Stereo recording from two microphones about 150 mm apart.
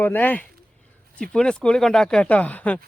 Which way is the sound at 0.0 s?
10° left (ahead or behind).